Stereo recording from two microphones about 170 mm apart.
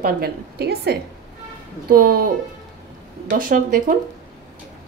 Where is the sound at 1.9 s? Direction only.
60° right (ahead or behind).